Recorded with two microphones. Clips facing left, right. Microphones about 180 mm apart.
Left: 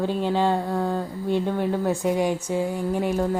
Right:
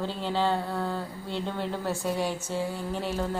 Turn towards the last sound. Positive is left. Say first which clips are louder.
# left 7 dB
turn(degrees=10)  # may be behind; listen again after turning